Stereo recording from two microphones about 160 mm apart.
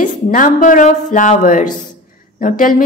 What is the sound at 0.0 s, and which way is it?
A woman's voice, 55° left (ahead or behind).